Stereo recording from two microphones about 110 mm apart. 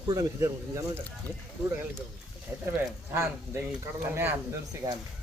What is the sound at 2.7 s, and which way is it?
Speech, 20° right (ahead or behind).